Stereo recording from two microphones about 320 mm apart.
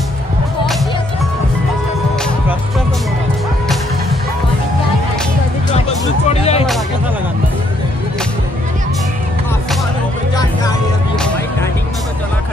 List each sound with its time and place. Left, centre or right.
5.7 s music: left
10.3 s music: centre